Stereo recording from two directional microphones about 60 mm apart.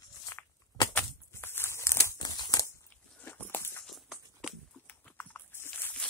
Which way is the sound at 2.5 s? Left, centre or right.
Left.